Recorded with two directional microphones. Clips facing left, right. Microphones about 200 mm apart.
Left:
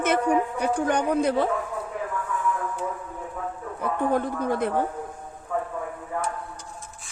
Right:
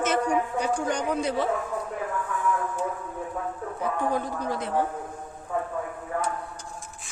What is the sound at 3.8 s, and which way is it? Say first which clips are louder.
Speech: left 3 dB; 55° left (ahead or behind).